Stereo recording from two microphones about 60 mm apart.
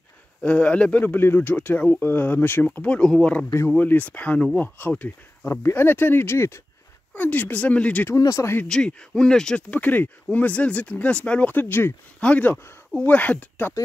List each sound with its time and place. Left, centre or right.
0.4 s speech: left
1.0 s speech: left
3.0 s speech: centre
3.7 s speech: left
5.5 s speech: left
7.2 s speech: left
8.2 s speech: left
8.6 s speech: centre
9.6 s speech: left
11.5 s speech: left
12.2 s speech: left